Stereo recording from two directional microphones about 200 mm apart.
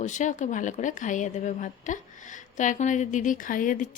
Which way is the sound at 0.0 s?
40° left (ahead or behind).